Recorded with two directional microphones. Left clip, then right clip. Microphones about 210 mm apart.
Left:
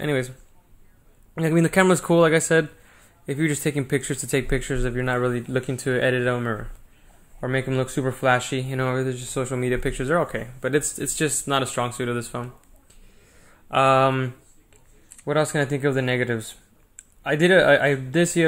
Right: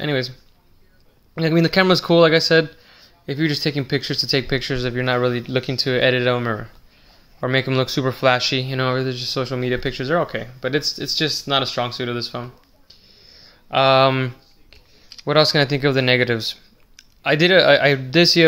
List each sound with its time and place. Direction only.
0.0 s speech: 5° right (ahead or behind)
1.3 s speech: 10° right (ahead or behind)
13.3 s a sound: centre (ahead or behind); by 16.4 s 25° right (ahead or behind)
17.2 s speech: 25° right (ahead or behind)